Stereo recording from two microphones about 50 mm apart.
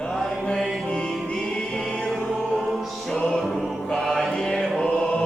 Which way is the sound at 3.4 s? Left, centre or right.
Centre.